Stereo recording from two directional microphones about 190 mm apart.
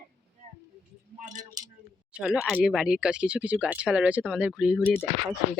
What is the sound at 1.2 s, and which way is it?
Speech, 40° right (ahead or behind).